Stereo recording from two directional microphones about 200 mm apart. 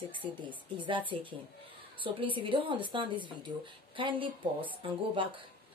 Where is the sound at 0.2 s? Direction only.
25° right (ahead or behind).